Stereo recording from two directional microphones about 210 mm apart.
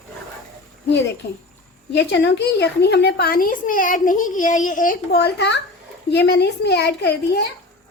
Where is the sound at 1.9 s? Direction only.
55° left (ahead or behind).